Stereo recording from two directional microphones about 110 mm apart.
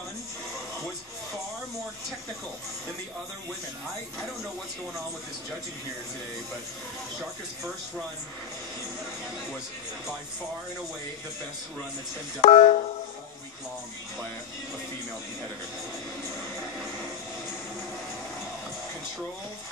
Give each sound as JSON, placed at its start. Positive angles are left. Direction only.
{"t": 12.4, "sound": "speech", "side_deg": 70}